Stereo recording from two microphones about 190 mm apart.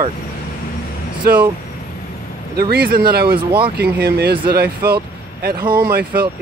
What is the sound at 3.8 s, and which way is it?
Speech, 55° right (ahead or behind).